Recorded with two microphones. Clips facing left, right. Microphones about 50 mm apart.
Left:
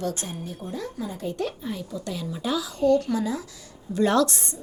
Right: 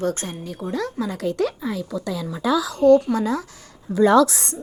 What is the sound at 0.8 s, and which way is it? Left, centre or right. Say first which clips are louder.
Speech: right 7 dB; right.